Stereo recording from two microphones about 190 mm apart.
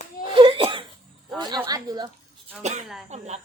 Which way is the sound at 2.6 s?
35° right (ahead or behind).